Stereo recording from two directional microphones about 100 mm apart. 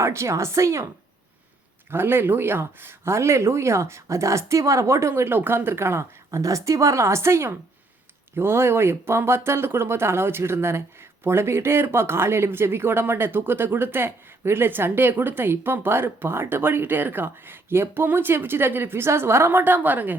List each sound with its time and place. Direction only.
0.0 s speech: 30° right (ahead or behind)
1.9 s speech: 20° right (ahead or behind)